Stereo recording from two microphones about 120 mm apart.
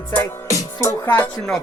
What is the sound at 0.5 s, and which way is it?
Music, 25° left (ahead or behind).